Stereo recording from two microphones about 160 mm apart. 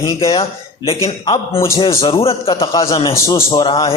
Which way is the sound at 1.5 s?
15° left (ahead or behind).